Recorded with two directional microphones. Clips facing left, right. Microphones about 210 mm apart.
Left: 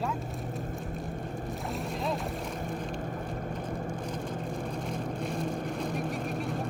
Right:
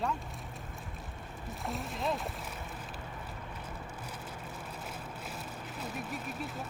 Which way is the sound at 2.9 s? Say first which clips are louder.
Left 9 dB; 50° left (ahead or behind).